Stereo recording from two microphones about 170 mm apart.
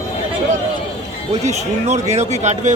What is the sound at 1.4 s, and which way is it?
A man's voice, 40° right (ahead or behind).